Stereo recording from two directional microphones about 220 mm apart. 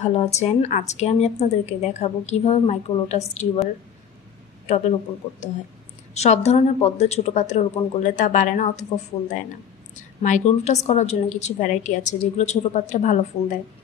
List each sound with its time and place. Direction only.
0.0 s a woman's voice: 30° left (ahead or behind)
4.6 s speech: 30° left (ahead or behind)
6.1 s speech: 30° left (ahead or behind)